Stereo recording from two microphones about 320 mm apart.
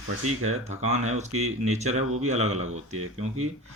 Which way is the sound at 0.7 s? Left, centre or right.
Right.